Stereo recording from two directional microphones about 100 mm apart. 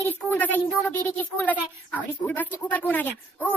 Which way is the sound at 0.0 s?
20° left (ahead or behind).